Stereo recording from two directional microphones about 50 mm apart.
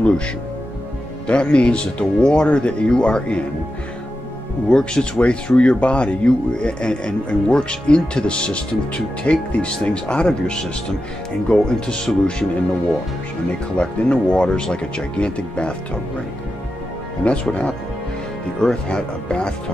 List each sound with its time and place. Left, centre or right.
1.2 s speech: left
4.6 s speech: centre
13.7 s speech: centre
17.2 s speech: left